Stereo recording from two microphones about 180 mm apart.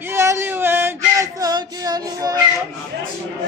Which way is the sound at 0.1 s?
15° right (ahead or behind).